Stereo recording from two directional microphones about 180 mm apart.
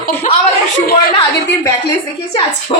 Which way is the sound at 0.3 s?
45° left (ahead or behind).